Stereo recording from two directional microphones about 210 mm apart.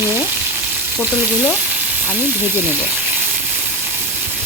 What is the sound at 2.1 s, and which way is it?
Speech, 10° right (ahead or behind).